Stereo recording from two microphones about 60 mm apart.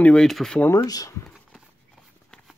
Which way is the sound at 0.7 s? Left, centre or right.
Left.